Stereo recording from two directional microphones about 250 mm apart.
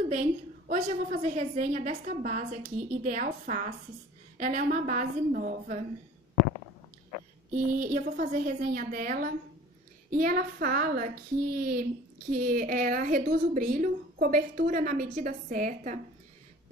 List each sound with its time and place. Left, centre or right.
0.1 s a woman's voice: right
7.5 s a woman's voice: right